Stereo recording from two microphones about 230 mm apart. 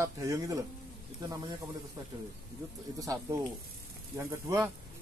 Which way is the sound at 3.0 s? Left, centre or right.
Centre.